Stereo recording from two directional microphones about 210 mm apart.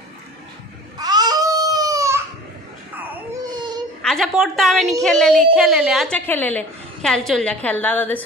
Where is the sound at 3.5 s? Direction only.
20° right (ahead or behind).